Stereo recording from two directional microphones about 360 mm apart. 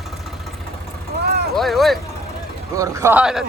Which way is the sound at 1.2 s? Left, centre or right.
Right.